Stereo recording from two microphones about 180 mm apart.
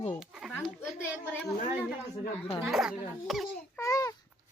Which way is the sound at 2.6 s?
Centre (ahead or behind).